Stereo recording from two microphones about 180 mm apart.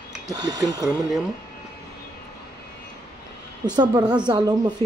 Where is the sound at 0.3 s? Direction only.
20° right (ahead or behind).